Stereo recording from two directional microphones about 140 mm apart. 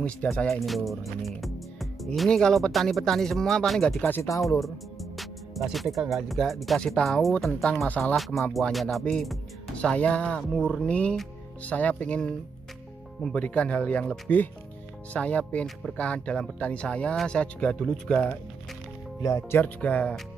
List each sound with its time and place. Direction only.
0.0 s speech: 10° left (ahead or behind)
4.0 s speech: 15° left (ahead or behind)
4.6 s speech: centre (ahead or behind)
19.2 s speech: 20° left (ahead or behind)
19.6 s speech: 10° left (ahead or behind)